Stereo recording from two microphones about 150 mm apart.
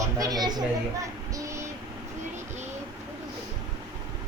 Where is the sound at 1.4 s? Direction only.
20° right (ahead or behind).